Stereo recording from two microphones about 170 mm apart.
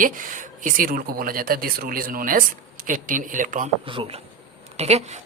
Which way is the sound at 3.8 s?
30° right (ahead or behind).